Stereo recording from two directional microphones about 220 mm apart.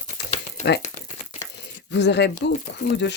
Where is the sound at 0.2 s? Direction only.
50° left (ahead or behind).